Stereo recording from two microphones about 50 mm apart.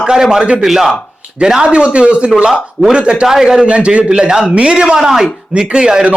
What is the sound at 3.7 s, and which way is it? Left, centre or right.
A man's voice, right.